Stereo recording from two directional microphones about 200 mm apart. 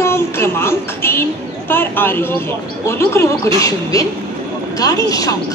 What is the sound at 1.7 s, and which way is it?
A woman's voice, 10° left (ahead or behind).